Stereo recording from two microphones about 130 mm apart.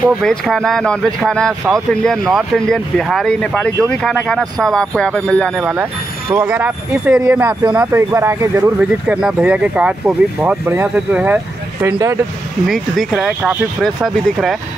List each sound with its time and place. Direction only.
0.0 s speech: 5° left (ahead or behind)
5.6 s speech: 15° right (ahead or behind)
8.7 s speech: 5° right (ahead or behind)
12.6 s speech: centre (ahead or behind)